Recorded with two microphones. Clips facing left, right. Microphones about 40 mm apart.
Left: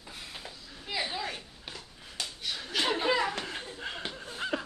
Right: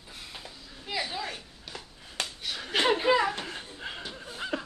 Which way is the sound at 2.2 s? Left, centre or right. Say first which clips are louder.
Right 4 dB; right.